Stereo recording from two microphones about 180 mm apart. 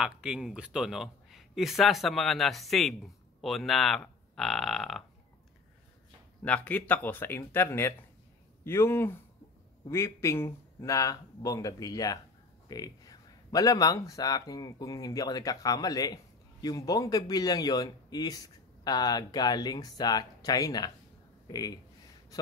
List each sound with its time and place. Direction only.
0.0 s a man's voice: 5° right (ahead or behind)
6.4 s speech: 10° left (ahead or behind)